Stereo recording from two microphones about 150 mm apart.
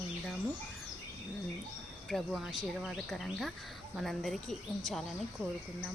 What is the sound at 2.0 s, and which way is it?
Speech, centre (ahead or behind).